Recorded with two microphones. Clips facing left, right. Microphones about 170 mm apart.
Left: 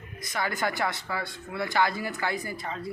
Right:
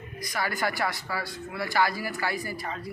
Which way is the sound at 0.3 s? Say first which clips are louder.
Even; 20° left (ahead or behind).